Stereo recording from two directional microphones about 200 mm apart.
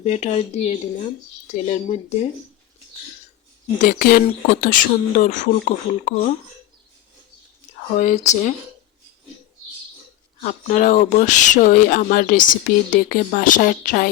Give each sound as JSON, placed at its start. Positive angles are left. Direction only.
{"t": 0.0, "sound": "speech", "side_deg": 35}
{"t": 3.8, "sound": "speech", "side_deg": 45}
{"t": 7.9, "sound": "speech", "side_deg": 35}
{"t": 10.4, "sound": "speech", "side_deg": 40}